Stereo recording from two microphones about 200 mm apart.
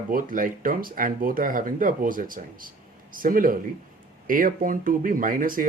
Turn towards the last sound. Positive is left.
turn(degrees=-45)  # may be behind; listen again after turning